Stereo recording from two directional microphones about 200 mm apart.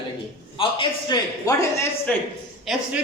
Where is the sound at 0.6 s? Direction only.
25° left (ahead or behind).